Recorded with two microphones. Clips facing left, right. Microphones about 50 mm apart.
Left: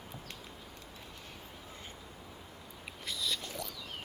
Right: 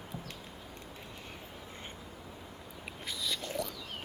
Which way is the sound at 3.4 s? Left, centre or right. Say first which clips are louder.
Right 6 dB; right.